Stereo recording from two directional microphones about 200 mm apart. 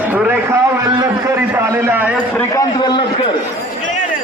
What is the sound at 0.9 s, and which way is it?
A man's voice, 15° right (ahead or behind).